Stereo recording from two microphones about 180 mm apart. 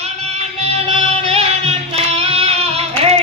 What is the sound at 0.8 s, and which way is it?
Music, 30° right (ahead or behind).